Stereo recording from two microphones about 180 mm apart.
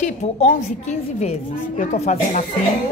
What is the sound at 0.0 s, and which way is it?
A woman's voice, 40° left (ahead or behind).